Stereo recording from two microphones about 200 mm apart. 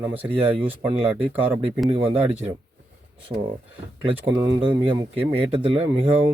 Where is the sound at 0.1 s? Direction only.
10° right (ahead or behind).